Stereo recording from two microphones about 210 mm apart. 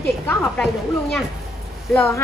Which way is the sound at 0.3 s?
Centre (ahead or behind).